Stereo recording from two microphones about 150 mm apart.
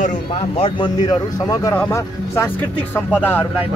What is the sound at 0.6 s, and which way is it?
Speech, 35° left (ahead or behind).